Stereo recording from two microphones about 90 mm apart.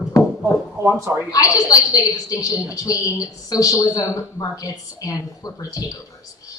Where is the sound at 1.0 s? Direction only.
20° right (ahead or behind).